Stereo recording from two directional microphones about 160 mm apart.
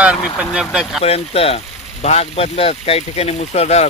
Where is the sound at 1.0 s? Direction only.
40° left (ahead or behind).